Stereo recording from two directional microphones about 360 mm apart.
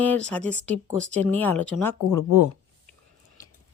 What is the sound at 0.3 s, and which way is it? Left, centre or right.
Speech, centre.